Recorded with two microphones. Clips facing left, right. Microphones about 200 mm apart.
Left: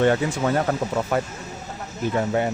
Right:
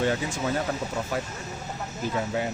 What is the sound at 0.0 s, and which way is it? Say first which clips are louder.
A man's voice: left 6 dB; 65° left (ahead or behind).